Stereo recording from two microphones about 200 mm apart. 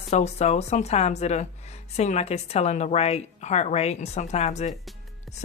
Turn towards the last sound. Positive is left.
turn(degrees=35)  # may be behind; listen again after turning